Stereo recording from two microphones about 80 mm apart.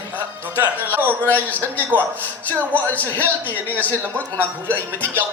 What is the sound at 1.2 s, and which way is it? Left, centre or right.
Speech, left.